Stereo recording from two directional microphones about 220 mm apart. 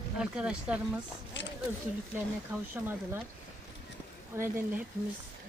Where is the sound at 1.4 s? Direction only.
55° left (ahead or behind).